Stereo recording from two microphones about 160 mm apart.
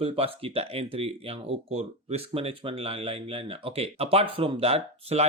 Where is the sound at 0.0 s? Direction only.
35° right (ahead or behind).